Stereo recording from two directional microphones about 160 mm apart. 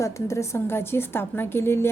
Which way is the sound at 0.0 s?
20° left (ahead or behind).